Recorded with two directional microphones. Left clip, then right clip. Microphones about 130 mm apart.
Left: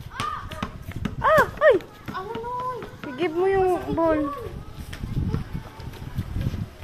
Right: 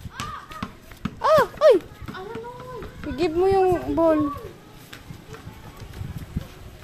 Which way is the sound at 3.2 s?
60° right (ahead or behind).